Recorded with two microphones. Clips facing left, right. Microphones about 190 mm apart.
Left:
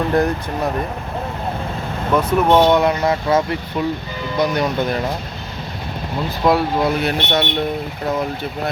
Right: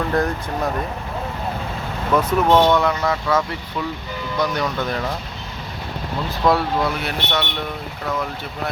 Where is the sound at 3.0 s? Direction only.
35° left (ahead or behind).